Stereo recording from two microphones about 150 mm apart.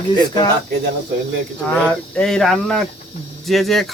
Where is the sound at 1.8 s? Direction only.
5° left (ahead or behind).